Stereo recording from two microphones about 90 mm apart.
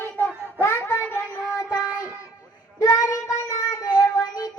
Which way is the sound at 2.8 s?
40° left (ahead or behind).